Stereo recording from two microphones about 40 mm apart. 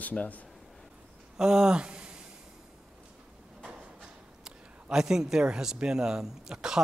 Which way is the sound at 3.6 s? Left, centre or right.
Centre.